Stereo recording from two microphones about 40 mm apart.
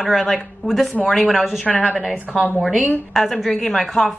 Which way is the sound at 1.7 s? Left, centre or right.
Left.